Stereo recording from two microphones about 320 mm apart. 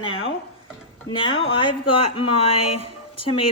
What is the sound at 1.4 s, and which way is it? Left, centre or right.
Speech, centre.